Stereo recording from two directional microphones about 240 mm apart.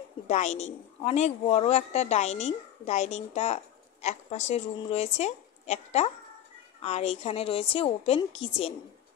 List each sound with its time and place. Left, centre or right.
0.3 s a woman's voice: left